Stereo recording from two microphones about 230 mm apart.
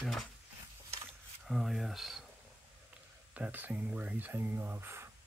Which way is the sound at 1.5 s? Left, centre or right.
Centre.